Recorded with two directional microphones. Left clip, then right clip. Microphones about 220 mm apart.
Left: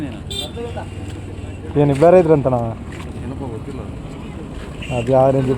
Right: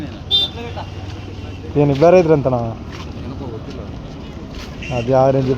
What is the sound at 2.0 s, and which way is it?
Speech, 5° left (ahead or behind).